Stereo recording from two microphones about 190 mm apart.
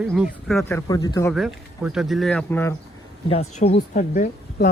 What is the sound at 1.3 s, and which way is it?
Speech, centre (ahead or behind).